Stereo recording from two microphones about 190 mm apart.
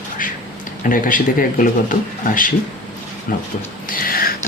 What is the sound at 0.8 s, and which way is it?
Speech, 45° left (ahead or behind).